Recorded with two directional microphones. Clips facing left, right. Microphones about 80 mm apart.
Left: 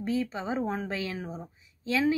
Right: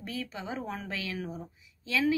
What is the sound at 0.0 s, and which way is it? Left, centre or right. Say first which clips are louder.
Speech: left 8 dB; left.